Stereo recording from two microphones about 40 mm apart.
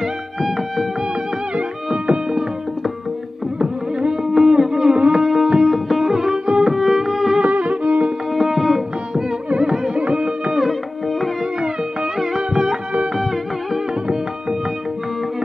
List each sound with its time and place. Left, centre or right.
0.0 s music: centre
3.5 s music: centre
4.9 s music: right
5.2 s music: centre
7.4 s music: right
8.3 s music: centre
9.9 s music: right
10.5 s music: centre
12.4 s music: centre